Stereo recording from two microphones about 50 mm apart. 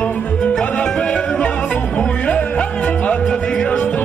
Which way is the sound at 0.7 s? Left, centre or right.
Left.